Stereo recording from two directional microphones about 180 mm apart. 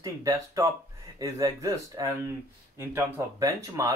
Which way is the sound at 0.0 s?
20° right (ahead or behind).